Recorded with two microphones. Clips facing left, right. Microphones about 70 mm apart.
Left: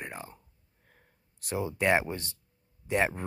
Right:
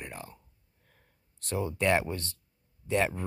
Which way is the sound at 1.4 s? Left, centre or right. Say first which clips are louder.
Even; centre.